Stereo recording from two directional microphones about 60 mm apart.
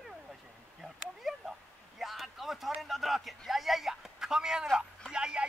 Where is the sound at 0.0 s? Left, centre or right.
Centre.